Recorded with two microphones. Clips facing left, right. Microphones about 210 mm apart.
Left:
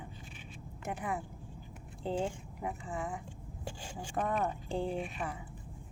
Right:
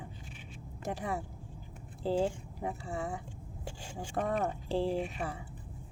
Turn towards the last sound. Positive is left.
turn(degrees=-30)  # may be behind; listen again after turning